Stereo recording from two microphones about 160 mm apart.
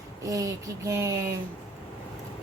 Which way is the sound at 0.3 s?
20° right (ahead or behind).